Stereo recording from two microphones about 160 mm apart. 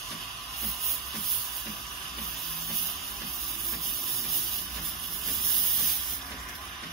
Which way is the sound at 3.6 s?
Centre (ahead or behind).